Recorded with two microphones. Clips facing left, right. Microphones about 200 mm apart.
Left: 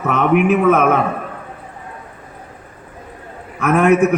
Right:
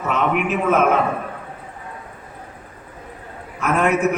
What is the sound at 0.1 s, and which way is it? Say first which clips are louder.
Speech: left 6 dB; 60° left (ahead or behind).